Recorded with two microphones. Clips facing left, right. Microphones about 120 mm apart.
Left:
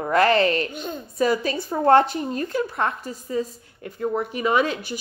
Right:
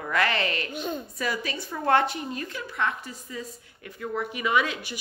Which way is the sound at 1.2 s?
35° left (ahead or behind).